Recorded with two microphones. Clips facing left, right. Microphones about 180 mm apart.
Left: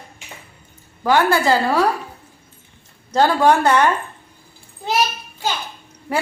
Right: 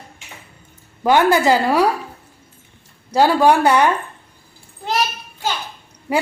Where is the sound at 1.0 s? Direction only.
20° right (ahead or behind).